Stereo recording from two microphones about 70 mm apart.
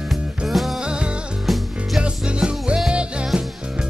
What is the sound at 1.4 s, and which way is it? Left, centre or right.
Music, centre.